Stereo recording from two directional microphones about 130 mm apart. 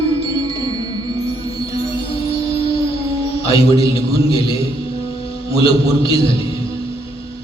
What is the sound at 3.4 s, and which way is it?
Music, 45° left (ahead or behind).